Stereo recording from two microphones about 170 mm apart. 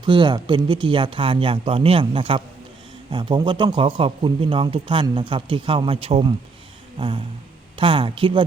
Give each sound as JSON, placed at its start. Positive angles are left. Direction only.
{"t": 0.0, "sound": "speech", "side_deg": -30}
{"t": 7.8, "sound": "speech", "side_deg": -30}